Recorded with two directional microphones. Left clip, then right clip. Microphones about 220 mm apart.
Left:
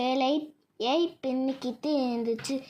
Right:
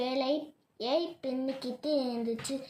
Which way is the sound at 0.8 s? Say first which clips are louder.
Left 4 dB; 25° left (ahead or behind).